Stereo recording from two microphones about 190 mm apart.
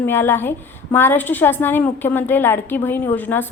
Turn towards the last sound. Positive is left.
turn(degrees=10)  # may be behind; listen again after turning